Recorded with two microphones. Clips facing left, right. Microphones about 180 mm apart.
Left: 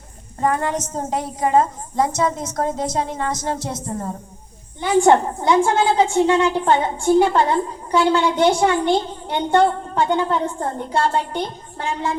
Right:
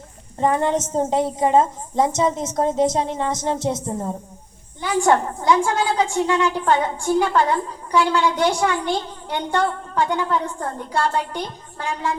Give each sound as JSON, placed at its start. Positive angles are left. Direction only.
{"t": 0.3, "sound": "a woman's voice", "side_deg": -25}
{"t": 4.8, "sound": "a woman's voice", "side_deg": 25}